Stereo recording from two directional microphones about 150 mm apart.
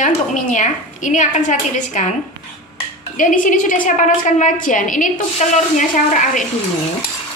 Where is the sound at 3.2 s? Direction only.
60° left (ahead or behind).